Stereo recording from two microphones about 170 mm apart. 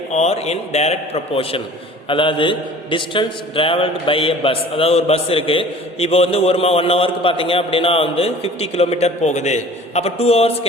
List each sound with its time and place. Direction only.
0.1 s a man's voice: 40° left (ahead or behind)